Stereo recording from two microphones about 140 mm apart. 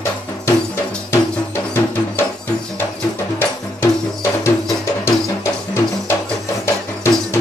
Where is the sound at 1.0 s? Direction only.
15° left (ahead or behind).